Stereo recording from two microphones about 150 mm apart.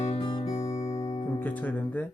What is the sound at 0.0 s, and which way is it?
Music, 40° left (ahead or behind).